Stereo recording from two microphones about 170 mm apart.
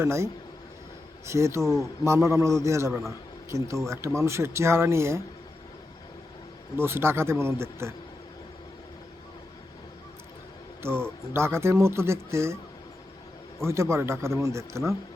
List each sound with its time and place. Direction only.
0.0 s a man's voice: 15° right (ahead or behind)
6.7 s a man's voice: 15° right (ahead or behind)
11.3 s a man's voice: 15° right (ahead or behind)
13.6 s a man's voice: 15° right (ahead or behind)